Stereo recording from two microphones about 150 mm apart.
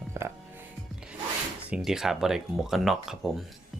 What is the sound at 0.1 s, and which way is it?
Music, 20° right (ahead or behind).